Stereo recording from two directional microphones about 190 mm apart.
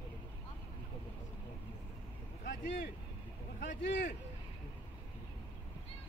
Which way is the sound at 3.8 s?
70° left (ahead or behind).